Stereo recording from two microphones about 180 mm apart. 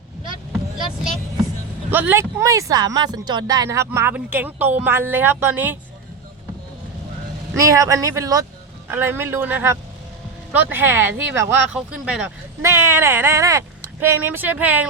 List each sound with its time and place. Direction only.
1.9 s speech: 10° right (ahead or behind)
7.6 s speech: 20° right (ahead or behind)